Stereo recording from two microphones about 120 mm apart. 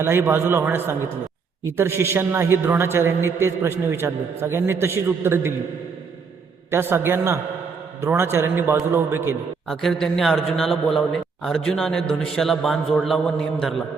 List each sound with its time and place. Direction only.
0.0 s a man's voice: 20° right (ahead or behind)
6.7 s a man's voice: 20° right (ahead or behind)
9.6 s a man's voice: 5° left (ahead or behind)